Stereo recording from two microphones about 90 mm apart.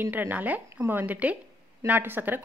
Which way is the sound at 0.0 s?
20° right (ahead or behind).